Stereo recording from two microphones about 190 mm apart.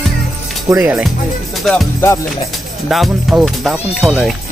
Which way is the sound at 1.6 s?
Centre (ahead or behind).